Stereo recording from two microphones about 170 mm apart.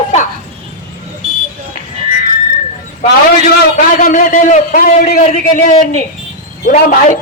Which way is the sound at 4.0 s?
50° left (ahead or behind).